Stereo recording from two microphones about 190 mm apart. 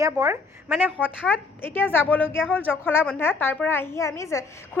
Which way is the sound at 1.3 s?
10° left (ahead or behind).